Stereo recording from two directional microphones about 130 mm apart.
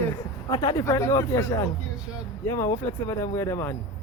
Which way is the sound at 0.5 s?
35° left (ahead or behind).